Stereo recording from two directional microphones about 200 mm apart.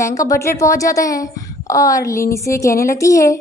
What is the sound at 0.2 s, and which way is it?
A woman's voice, 15° left (ahead or behind).